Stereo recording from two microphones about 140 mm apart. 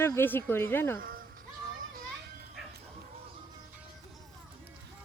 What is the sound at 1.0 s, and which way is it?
Music, 90° right.